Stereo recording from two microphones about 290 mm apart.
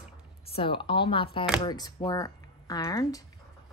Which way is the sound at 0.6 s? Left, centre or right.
Centre.